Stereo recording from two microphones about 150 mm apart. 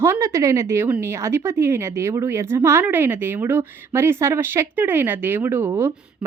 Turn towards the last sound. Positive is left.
turn(degrees=-15)  # may be behind; listen again after turning